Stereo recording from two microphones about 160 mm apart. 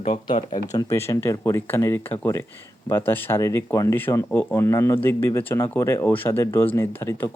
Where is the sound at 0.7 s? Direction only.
20° left (ahead or behind).